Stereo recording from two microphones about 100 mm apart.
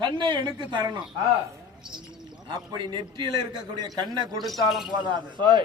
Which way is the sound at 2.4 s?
45° right (ahead or behind).